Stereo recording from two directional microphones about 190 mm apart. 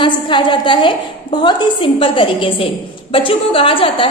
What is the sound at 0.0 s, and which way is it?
A woman's voice, 25° left (ahead or behind).